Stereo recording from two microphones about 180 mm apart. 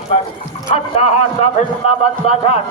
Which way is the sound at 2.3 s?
35° left (ahead or behind).